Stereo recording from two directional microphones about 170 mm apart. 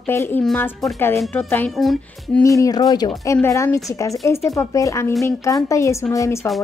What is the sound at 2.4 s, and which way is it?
Speech, 20° left (ahead or behind).